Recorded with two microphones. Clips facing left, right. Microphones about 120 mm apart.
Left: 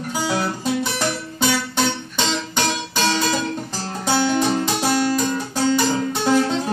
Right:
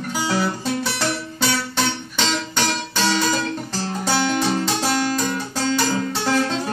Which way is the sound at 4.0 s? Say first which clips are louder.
Left 2 dB; 15° left (ahead or behind).